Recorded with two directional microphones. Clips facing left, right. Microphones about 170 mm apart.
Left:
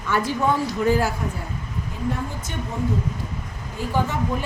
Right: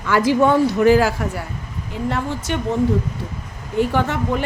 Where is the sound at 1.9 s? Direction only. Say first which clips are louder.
Right 5 dB; 75° right (ahead or behind).